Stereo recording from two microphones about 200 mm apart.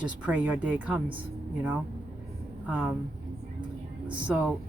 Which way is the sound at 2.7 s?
5° right (ahead or behind).